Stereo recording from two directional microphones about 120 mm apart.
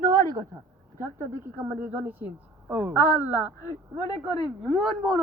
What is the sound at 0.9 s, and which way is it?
A woman's voice, 20° right (ahead or behind).